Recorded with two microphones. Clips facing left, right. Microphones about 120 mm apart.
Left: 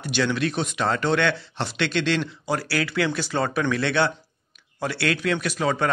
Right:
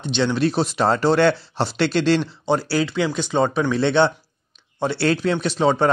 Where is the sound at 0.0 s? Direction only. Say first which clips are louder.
Right 4 dB; 25° right (ahead or behind).